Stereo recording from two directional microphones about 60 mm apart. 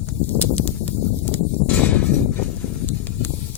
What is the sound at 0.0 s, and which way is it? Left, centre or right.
Horse, left.